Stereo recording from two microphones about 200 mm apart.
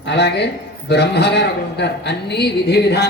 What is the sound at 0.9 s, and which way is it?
A woman's voice, 55° left (ahead or behind).